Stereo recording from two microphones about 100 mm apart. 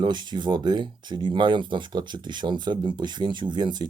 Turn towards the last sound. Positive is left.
turn(degrees=-45)  # may be behind; listen again after turning